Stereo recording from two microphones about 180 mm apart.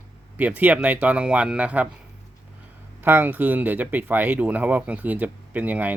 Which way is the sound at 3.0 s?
10° right (ahead or behind).